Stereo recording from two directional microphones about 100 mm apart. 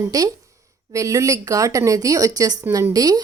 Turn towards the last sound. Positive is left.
turn(degrees=-40)  # may be behind; listen again after turning